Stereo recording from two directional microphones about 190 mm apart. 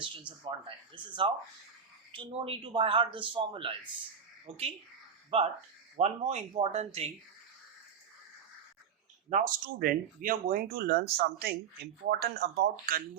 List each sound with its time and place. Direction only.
0.0 s a man's voice: 25° right (ahead or behind)
2.1 s a man's voice: 30° right (ahead or behind)
9.3 s speech: 50° right (ahead or behind)